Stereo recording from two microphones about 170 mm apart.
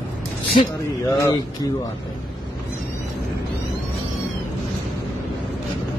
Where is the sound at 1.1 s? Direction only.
20° left (ahead or behind).